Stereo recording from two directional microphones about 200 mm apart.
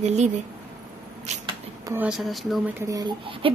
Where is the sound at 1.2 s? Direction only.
35° right (ahead or behind).